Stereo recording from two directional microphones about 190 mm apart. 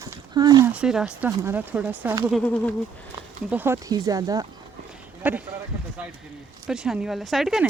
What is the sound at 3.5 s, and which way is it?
Speech, 10° right (ahead or behind).